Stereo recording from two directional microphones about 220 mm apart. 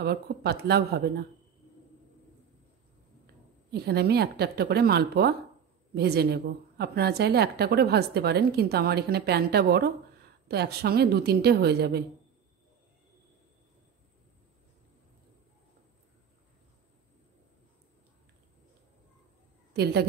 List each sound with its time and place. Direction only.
0.0 s a woman's voice: 45° right (ahead or behind)
3.7 s a woman's voice: 45° right (ahead or behind)
19.7 s a woman's voice: 45° right (ahead or behind)